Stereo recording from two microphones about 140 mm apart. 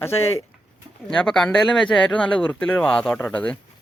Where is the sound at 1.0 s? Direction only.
5° left (ahead or behind).